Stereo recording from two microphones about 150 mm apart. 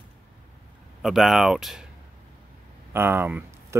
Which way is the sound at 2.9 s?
15° right (ahead or behind).